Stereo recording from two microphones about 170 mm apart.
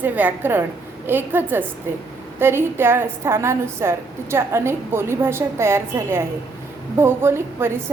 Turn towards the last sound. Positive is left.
turn(degrees=-15)  # may be behind; listen again after turning